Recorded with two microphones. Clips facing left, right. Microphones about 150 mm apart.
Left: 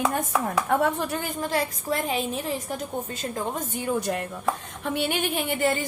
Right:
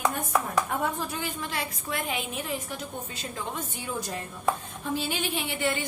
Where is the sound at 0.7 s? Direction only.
65° left (ahead or behind).